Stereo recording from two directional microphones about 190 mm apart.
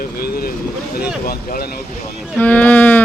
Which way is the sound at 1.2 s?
50° left (ahead or behind).